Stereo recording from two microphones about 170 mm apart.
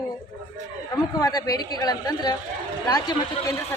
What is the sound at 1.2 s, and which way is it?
Speech, 20° left (ahead or behind).